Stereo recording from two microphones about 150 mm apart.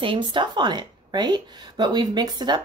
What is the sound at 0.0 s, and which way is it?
Speech, 35° right (ahead or behind).